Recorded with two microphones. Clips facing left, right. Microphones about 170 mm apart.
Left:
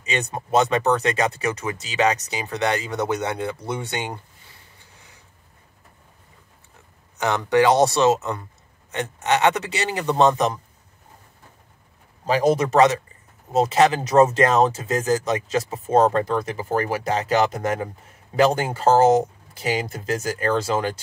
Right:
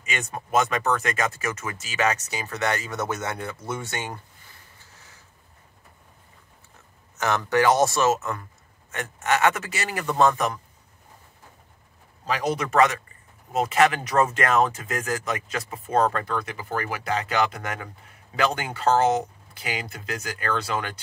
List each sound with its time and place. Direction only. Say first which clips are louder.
0.0 s a man's voice: left 5 dB; 25° left (ahead or behind)
7.2 s a man's voice: left 4 dB; 15° left (ahead or behind)
12.5 s a man's voice: left 4 dB; 25° left (ahead or behind)
13.5 s a man's voice: left 3 dB; 35° left (ahead or behind)